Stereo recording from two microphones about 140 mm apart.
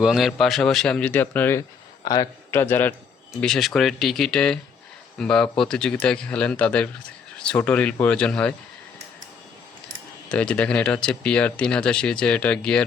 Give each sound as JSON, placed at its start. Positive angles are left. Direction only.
{"t": 0.0, "sound": "a man's voice", "side_deg": 0}
{"t": 2.0, "sound": "speech", "side_deg": 25}
{"t": 2.6, "sound": "speech", "side_deg": 15}
{"t": 3.4, "sound": "a man's voice", "side_deg": 5}
{"t": 10.2, "sound": "speech", "side_deg": 10}